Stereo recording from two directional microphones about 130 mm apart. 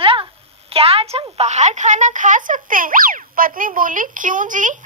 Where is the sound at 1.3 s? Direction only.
60° right (ahead or behind); by 4.8 s 80° right.